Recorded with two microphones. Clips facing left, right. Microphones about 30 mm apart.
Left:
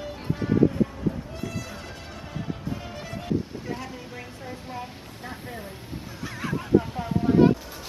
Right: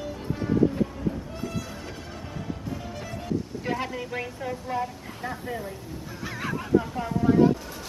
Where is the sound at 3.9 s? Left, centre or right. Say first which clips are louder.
Right 6 dB; right.